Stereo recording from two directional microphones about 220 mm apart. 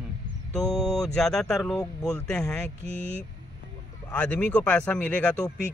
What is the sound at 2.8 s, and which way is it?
Speech, 50° left (ahead or behind).